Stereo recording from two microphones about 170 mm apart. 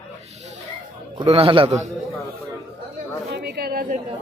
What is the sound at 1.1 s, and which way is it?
Speech, 35° right (ahead or behind).